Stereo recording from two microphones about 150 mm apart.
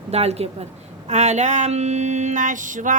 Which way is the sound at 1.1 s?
50° right (ahead or behind).